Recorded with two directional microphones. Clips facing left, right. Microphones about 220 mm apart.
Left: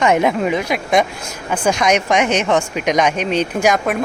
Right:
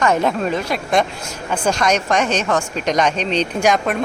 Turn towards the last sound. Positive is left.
turn(degrees=5)  # may be behind; listen again after turning